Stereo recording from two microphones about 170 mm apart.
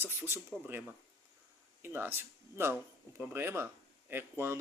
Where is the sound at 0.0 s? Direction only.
10° right (ahead or behind).